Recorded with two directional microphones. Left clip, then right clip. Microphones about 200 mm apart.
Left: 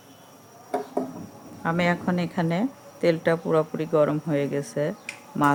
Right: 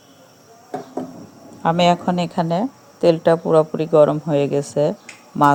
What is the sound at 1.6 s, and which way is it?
A woman's voice, 15° right (ahead or behind).